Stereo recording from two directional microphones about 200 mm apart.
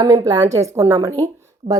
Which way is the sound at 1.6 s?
45° right (ahead or behind).